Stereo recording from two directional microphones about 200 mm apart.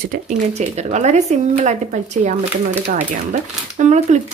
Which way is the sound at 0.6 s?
35° right (ahead or behind).